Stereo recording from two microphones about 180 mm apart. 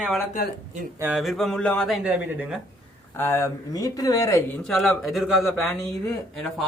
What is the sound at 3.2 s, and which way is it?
A man's voice, 15° left (ahead or behind).